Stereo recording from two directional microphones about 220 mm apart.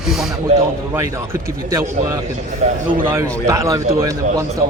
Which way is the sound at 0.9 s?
15° right (ahead or behind).